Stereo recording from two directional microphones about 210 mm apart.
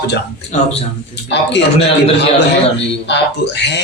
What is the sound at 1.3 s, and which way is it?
Speech, 55° left (ahead or behind).